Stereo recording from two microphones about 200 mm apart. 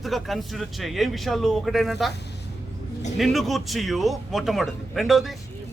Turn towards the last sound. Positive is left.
turn(degrees=0)  # may be behind; listen again after turning